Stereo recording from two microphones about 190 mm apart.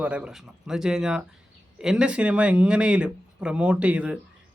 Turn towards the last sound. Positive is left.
turn(degrees=-5)  # may be behind; listen again after turning